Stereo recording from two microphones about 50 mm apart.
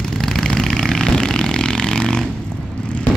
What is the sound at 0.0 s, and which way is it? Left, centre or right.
Vehicle, centre.